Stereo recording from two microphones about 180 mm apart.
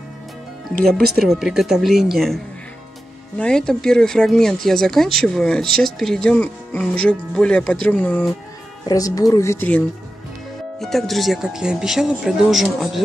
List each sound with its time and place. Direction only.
1.2 s speech: centre (ahead or behind)
8.8 s speech: 20° left (ahead or behind); by 13.0 s centre (ahead or behind)